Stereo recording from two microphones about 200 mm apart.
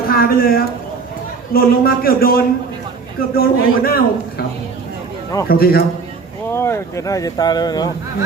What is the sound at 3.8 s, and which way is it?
Speech, 45° left (ahead or behind).